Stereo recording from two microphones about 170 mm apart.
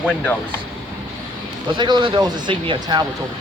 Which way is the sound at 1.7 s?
25° right (ahead or behind).